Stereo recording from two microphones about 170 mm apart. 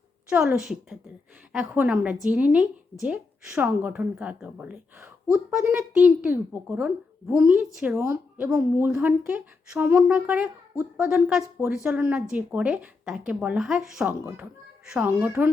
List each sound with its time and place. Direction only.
0.3 s a woman's voice: 5° right (ahead or behind)
8.4 s a woman's voice: 5° right (ahead or behind)